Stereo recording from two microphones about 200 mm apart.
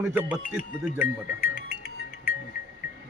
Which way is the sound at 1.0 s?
45° left (ahead or behind).